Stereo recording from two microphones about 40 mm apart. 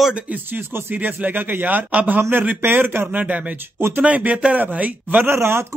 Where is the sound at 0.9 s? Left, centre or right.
Right.